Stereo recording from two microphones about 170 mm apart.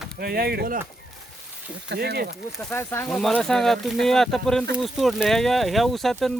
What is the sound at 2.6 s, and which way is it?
Speech, 10° left (ahead or behind).